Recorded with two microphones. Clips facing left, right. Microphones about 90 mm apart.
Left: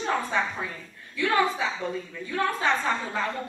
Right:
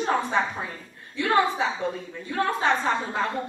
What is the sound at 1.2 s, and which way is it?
A woman's voice, 30° right (ahead or behind).